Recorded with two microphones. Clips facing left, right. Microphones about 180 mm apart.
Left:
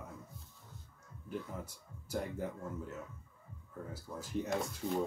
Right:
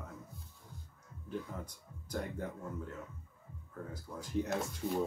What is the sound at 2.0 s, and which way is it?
Speech, 5° left (ahead or behind).